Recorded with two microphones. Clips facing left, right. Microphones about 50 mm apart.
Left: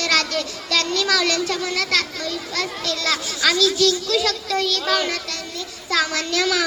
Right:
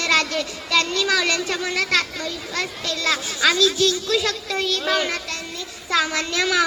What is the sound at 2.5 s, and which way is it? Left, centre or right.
A child's voice, right.